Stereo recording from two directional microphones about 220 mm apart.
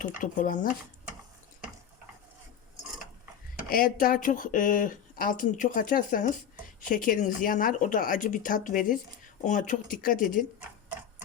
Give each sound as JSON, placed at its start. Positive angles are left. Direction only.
{"t": 0.2, "sound": "speech", "side_deg": 35}
{"t": 3.7, "sound": "speech", "side_deg": 40}